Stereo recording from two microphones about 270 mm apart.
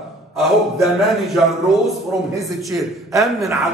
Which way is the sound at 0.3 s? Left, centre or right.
Centre.